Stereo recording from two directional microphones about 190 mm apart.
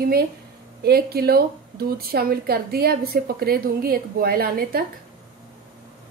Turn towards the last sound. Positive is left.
turn(degrees=-50)  # may be behind; listen again after turning